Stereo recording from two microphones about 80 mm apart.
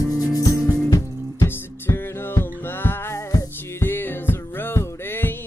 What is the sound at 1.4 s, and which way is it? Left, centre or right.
Music, left.